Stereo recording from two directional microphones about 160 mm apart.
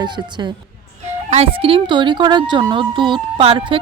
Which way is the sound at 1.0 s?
40° right (ahead or behind).